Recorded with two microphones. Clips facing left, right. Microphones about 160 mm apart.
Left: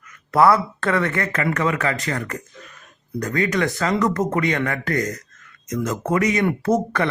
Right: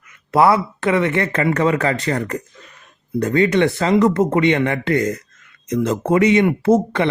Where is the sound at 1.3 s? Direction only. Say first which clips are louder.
Right 5 dB; 30° right (ahead or behind).